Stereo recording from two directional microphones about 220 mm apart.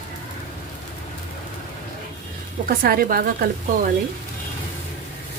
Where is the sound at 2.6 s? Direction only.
40° right (ahead or behind).